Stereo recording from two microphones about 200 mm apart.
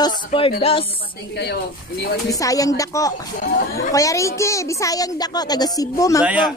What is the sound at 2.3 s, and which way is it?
Speech, 15° left (ahead or behind).